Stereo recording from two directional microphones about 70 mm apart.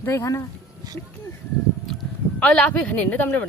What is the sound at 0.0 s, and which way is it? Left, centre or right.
Speech, left.